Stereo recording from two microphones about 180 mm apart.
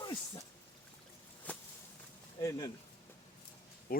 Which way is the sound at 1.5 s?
10° left (ahead or behind).